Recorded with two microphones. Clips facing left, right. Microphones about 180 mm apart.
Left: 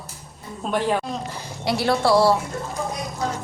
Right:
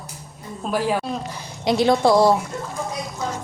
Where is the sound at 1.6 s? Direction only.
20° right (ahead or behind).